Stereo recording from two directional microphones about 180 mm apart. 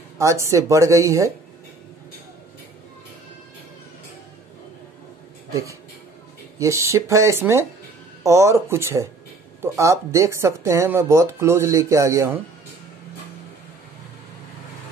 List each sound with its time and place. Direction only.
0.2 s speech: 15° right (ahead or behind)
5.5 s speech: 15° right (ahead or behind)